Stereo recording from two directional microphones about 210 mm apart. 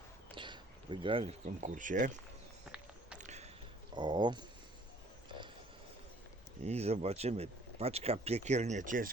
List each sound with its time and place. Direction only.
0.3 s speech: 20° right (ahead or behind); by 2.1 s 40° right (ahead or behind)
2.6 s walk: 5° right (ahead or behind)
3.2 s a sound: 35° right (ahead or behind)
3.9 s speech: 20° right (ahead or behind)
6.7 s speech: 30° right (ahead or behind)